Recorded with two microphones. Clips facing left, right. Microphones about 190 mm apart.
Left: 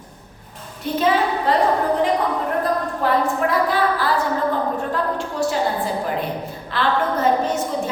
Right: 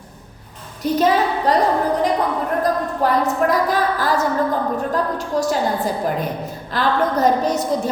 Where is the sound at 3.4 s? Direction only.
45° right (ahead or behind).